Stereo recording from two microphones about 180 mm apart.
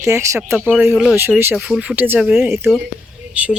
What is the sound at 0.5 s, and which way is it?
Speech, 5° right (ahead or behind).